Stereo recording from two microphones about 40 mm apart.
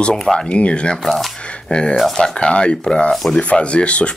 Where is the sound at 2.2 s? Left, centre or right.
Left.